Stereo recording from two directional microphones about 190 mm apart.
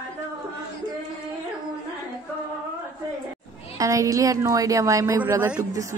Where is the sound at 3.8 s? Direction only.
15° right (ahead or behind).